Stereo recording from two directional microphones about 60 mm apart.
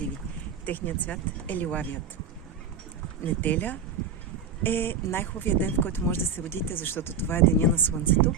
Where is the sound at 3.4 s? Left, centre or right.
Left.